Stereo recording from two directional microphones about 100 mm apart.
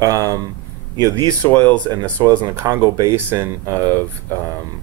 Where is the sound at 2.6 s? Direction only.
40° right (ahead or behind).